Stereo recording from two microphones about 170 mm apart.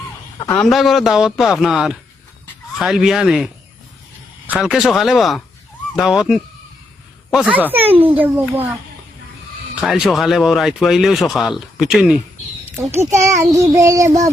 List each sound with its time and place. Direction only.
0.4 s speech: 5° left (ahead or behind)
7.8 s a child's voice: 35° right (ahead or behind)
8.2 s speech: 10° right (ahead or behind)
9.8 s speech: centre (ahead or behind)
13.1 s child singing: 15° right (ahead or behind)